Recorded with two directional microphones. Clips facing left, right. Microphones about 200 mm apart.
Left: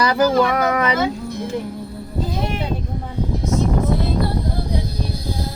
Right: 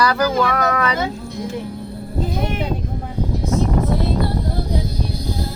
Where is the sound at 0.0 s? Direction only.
20° left (ahead or behind).